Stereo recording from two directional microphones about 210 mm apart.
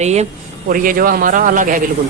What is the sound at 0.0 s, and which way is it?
Speech, 30° right (ahead or behind).